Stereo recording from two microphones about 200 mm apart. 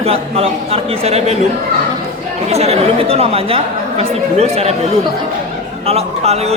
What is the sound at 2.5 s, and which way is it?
A man's voice, 30° right (ahead or behind).